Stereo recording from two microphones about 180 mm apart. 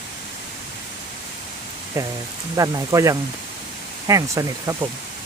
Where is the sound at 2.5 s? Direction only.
20° right (ahead or behind).